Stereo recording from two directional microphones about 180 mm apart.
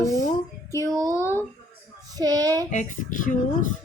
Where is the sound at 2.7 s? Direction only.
45° left (ahead or behind).